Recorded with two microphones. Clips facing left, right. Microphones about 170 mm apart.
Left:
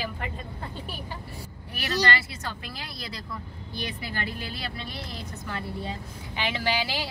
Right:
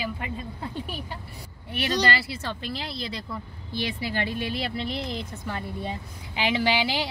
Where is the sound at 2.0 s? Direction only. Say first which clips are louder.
Right 2 dB; 30° right (ahead or behind).